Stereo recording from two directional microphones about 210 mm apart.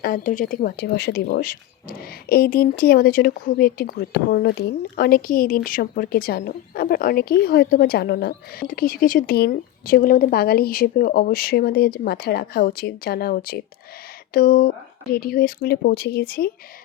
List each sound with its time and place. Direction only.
0.0 s speech: 40° left (ahead or behind)